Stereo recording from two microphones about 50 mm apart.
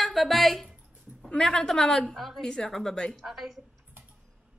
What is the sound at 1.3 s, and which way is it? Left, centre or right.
A woman's voice, centre.